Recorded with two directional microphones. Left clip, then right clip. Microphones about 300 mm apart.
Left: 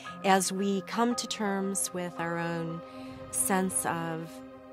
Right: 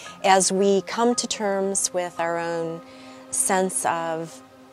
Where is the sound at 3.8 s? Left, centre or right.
Right.